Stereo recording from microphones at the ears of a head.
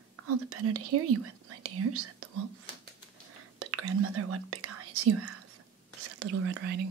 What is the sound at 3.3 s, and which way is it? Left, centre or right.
Whispering, right.